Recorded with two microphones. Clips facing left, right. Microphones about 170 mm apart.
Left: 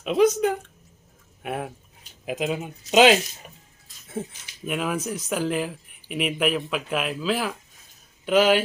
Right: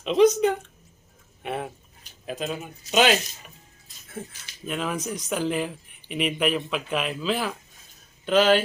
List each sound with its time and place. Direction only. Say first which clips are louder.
0.0 s speech: right 1 dB; 5° left (ahead or behind)
2.2 s speech: left 4 dB; 15° left (ahead or behind)
4.4 s speech: left 1 dB; 10° left (ahead or behind)